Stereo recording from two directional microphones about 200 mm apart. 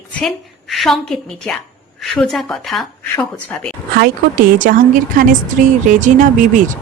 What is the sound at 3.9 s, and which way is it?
Speech, 45° right (ahead or behind).